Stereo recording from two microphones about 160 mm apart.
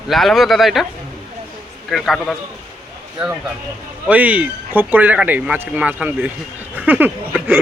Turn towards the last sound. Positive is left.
turn(degrees=-10)  # may be behind; listen again after turning